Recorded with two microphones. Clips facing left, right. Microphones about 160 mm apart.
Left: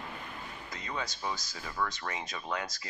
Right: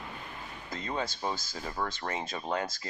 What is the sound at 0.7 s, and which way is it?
Speech, 30° right (ahead or behind).